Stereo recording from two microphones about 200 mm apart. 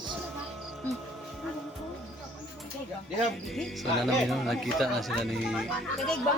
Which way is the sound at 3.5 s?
Centre (ahead or behind).